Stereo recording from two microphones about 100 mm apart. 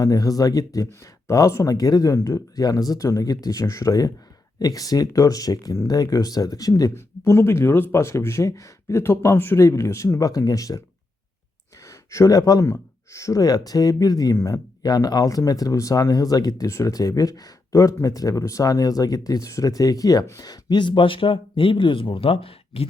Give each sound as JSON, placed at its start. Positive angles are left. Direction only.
{"t": 0.0, "sound": "speech", "side_deg": 35}
{"t": 6.9, "sound": "speech", "side_deg": 25}
{"t": 11.9, "sound": "speech", "side_deg": 35}